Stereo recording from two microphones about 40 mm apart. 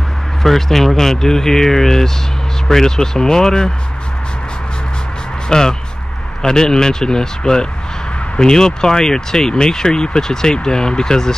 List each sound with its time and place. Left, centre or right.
0.4 s speech: centre
5.5 s speech: centre